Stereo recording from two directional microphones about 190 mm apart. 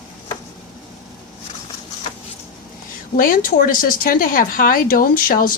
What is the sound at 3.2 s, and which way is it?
A woman's voice, 45° left (ahead or behind).